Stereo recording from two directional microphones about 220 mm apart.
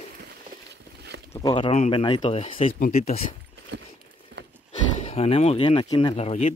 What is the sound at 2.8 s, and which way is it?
Speech, 40° left (ahead or behind).